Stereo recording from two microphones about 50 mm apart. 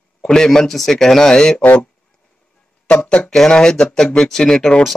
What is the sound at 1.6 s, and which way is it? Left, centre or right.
Speech, left.